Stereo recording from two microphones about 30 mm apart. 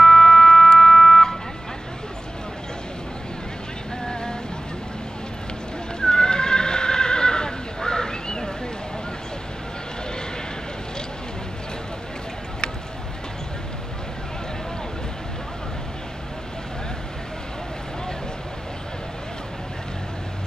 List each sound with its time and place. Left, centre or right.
0.0 s car alarm: left
4.0 s vehicle: left
5.9 s horse: left